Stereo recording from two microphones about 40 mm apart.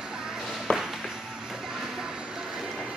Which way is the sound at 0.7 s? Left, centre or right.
Left.